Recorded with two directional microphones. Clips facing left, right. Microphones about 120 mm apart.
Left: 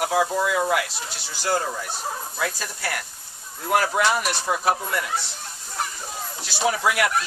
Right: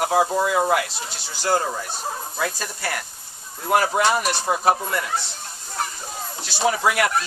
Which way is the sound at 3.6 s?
20° right (ahead or behind).